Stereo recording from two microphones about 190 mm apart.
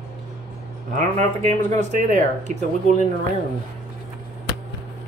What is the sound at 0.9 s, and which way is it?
Speech, 40° right (ahead or behind).